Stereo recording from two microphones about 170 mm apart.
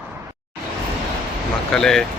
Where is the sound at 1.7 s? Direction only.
5° left (ahead or behind).